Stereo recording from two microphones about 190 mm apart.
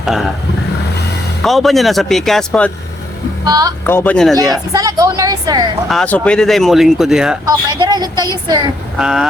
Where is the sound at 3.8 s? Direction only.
10° left (ahead or behind).